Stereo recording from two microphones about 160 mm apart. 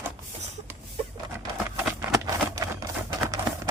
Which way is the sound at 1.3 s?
10° right (ahead or behind).